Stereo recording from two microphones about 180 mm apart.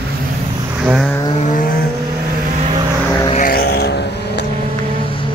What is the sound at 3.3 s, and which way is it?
Vehicle, 50° left (ahead or behind).